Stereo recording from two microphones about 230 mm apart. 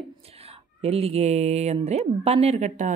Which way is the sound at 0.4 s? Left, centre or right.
Right.